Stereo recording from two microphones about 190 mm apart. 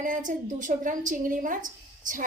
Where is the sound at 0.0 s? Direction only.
45° right (ahead or behind).